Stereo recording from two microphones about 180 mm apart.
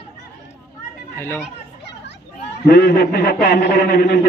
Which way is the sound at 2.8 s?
60° left (ahead or behind).